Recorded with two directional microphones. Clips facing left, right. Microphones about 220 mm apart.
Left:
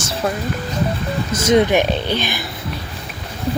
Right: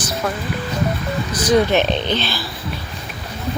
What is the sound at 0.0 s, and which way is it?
Music, 30° left (ahead or behind).